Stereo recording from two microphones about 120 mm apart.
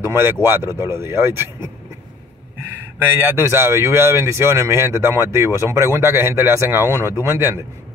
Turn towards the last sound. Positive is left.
turn(degrees=-20)  # may be behind; listen again after turning